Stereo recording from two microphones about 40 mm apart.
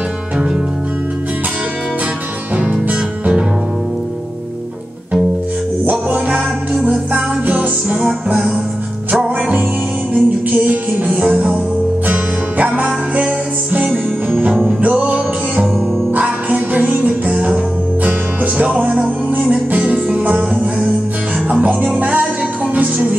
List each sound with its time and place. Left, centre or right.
2.6 s music: right
5.9 s music: right
7.4 s music: right
10.1 s music: right
12.1 s music: right
14.5 s music: centre
14.8 s music: right
16.2 s music: right
21.5 s music: right